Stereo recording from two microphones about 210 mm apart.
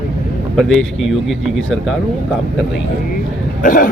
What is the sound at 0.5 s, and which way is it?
Speech, centre (ahead or behind).